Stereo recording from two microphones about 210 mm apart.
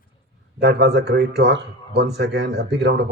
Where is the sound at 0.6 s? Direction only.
55° right (ahead or behind).